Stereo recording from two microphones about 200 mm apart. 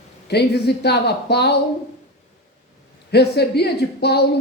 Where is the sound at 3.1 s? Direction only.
55° left (ahead or behind).